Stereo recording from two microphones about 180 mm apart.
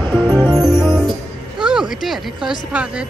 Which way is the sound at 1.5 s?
5° right (ahead or behind).